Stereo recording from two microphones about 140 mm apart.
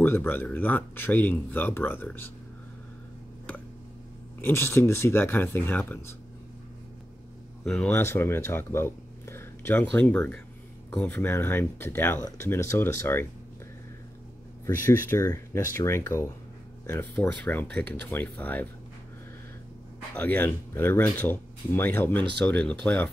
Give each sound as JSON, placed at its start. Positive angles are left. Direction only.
{"t": 0.0, "sound": "speech", "side_deg": 15}
{"t": 4.4, "sound": "speech", "side_deg": 15}
{"t": 7.6, "sound": "speech", "side_deg": 5}
{"t": 7.9, "sound": "speech", "side_deg": 15}
{"t": 14.9, "sound": "speech", "side_deg": 15}
{"t": 20.2, "sound": "speech", "side_deg": 15}